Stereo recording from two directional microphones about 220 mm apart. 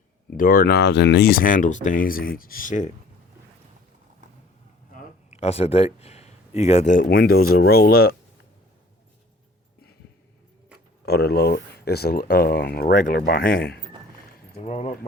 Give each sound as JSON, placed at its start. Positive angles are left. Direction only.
{"t": 0.3, "sound": "speech", "side_deg": 40}
{"t": 4.9, "sound": "speech", "side_deg": 30}
{"t": 11.0, "sound": "speech", "side_deg": 45}
{"t": 14.6, "sound": "speech", "side_deg": 30}